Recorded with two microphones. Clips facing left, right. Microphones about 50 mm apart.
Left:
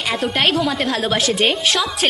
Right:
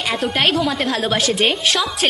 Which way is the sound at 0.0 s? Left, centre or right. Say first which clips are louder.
Even; centre.